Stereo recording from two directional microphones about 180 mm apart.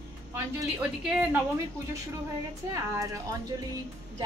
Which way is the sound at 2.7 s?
20° right (ahead or behind).